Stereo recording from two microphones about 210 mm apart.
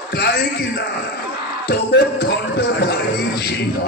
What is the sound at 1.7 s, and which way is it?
A man's voice, 50° left (ahead or behind).